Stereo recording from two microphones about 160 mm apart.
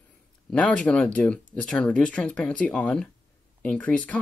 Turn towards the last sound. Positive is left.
turn(degrees=10)  # may be behind; listen again after turning